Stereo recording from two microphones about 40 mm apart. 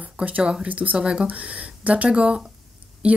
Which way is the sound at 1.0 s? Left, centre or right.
Right.